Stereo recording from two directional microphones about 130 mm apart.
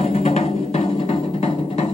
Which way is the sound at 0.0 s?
60° left (ahead or behind).